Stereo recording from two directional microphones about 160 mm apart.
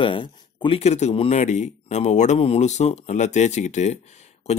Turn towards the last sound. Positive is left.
turn(degrees=45)  # may be behind; listen again after turning